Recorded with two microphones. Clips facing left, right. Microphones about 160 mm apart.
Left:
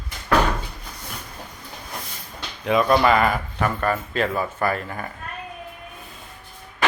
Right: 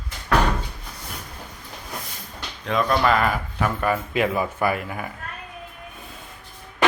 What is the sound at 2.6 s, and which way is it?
Speech, 5° left (ahead or behind).